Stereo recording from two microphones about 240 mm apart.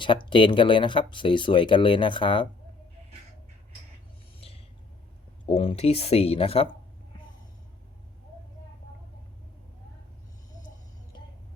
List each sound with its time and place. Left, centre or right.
0.3 s speech: centre
4.4 s vehicle: left
5.5 s speech: left